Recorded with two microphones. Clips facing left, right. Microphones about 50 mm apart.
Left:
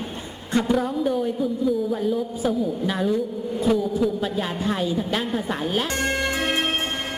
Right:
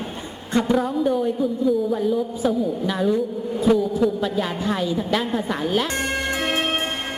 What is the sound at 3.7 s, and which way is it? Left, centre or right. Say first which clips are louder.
Music: right 3 dB; centre.